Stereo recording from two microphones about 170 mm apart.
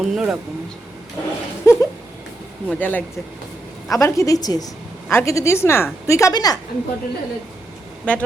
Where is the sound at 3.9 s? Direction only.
20° left (ahead or behind).